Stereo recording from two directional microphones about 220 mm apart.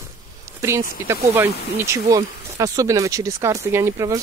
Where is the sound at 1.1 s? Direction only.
10° right (ahead or behind).